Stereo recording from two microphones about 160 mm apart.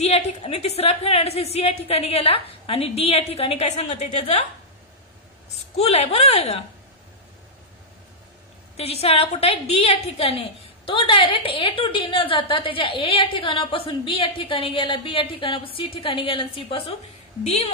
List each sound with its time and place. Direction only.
0.0 s a woman's voice: 40° left (ahead or behind)
5.5 s a woman's voice: 40° left (ahead or behind)
8.7 s a woman's voice: 40° left (ahead or behind)